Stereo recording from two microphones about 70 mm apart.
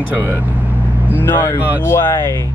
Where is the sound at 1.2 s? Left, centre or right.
Left.